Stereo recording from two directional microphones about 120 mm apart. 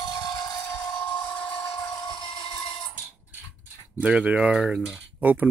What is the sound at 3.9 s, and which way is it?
Speech, 10° right (ahead or behind).